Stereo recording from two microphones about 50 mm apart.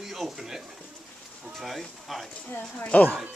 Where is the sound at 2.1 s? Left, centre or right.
Centre.